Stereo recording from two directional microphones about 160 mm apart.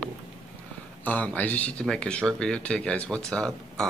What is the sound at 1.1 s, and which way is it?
Speech, 10° left (ahead or behind).